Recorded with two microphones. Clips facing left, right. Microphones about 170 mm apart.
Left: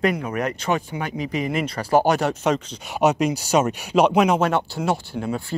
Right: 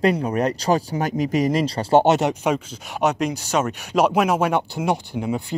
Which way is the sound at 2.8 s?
5° left (ahead or behind).